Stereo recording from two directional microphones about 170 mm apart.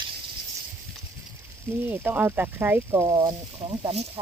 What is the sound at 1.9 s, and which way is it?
Speech, 10° right (ahead or behind).